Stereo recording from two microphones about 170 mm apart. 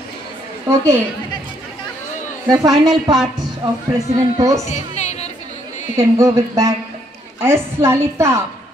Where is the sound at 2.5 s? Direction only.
20° right (ahead or behind).